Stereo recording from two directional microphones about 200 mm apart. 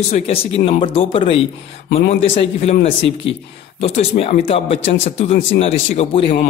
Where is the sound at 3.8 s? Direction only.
30° left (ahead or behind).